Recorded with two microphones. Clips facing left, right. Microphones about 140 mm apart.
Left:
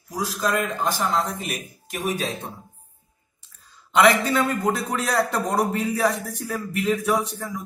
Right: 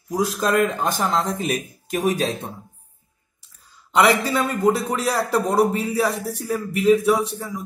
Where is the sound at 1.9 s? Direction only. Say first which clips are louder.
Right 6 dB; 40° right (ahead or behind).